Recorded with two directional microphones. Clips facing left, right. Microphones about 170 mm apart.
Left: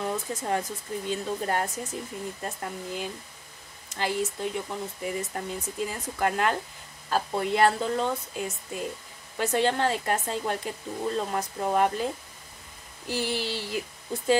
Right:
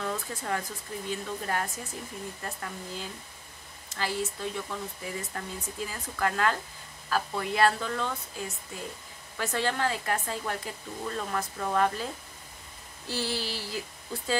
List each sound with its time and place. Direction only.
0.0 s speech: 20° left (ahead or behind)
2.4 s speech: 20° left (ahead or behind)
13.0 s a sound: 15° left (ahead or behind)